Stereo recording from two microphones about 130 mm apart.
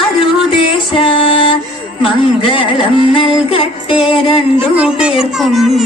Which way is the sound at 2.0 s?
40° left (ahead or behind).